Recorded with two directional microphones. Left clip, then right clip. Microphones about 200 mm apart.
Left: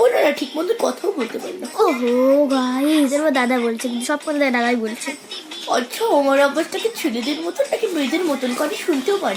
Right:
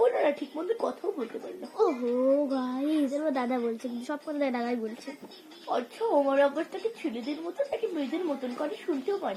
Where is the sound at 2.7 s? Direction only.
45° left (ahead or behind).